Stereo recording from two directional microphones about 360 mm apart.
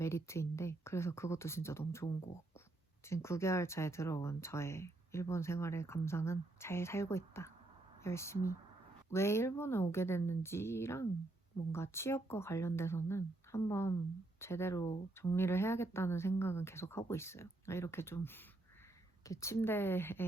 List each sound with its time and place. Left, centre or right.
0.0 s speech: centre